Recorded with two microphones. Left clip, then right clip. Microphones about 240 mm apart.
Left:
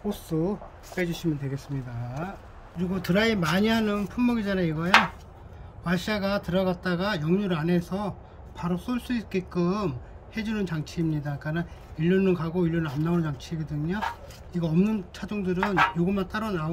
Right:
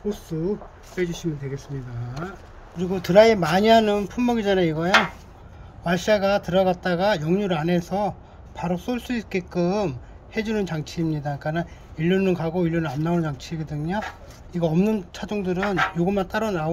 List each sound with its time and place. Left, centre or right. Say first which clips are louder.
0.9 s speech: right 2 dB; left
3.0 s a man's voice: right 10 dB; centre